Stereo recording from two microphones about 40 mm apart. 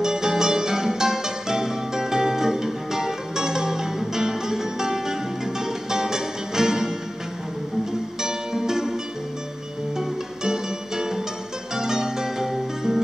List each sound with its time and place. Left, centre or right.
0.0 s music: centre
8.2 s music: centre
9.9 s music: centre